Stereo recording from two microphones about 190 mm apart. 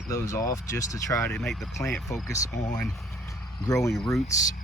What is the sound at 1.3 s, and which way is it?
Speech, centre (ahead or behind).